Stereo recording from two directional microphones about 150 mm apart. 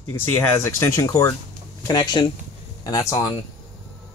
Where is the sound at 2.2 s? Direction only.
30° left (ahead or behind).